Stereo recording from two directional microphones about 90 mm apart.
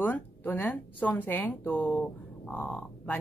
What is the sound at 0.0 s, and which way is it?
A woman's voice, 20° left (ahead or behind).